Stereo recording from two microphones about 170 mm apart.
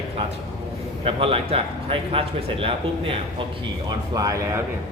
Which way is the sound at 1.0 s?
35° right (ahead or behind).